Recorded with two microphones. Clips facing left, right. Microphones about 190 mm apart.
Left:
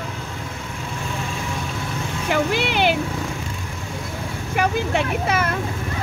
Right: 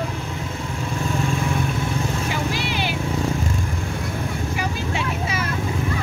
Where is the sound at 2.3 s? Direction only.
60° left (ahead or behind).